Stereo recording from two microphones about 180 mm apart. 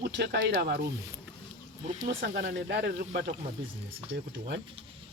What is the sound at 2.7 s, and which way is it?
Speech, 65° right (ahead or behind).